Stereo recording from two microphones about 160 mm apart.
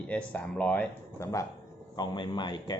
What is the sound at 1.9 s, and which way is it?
Speech, 30° left (ahead or behind).